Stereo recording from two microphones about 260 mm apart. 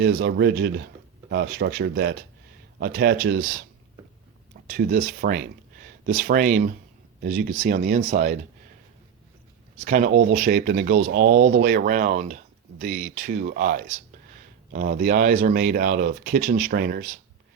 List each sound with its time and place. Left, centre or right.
0.0 s speech: right
4.6 s speech: right
9.8 s speech: right